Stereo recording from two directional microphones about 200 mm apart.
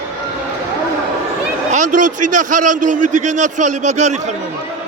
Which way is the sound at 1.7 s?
40° right (ahead or behind).